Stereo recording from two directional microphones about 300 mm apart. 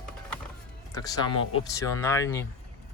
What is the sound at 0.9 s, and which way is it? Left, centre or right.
Speech, centre.